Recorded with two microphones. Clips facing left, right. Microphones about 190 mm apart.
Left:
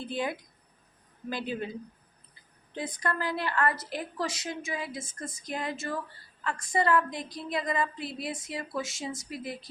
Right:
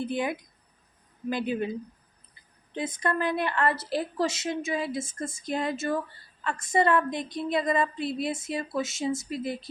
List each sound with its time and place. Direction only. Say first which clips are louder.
0.0 s speech: right 4 dB; 20° right (ahead or behind)
2.7 s speech: right 4 dB; 20° right (ahead or behind)